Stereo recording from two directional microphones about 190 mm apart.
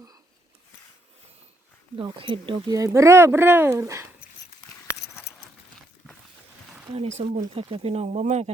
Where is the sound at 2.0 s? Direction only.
25° right (ahead or behind).